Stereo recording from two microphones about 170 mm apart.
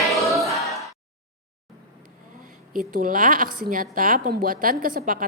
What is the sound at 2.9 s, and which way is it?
A woman's voice, 50° right (ahead or behind).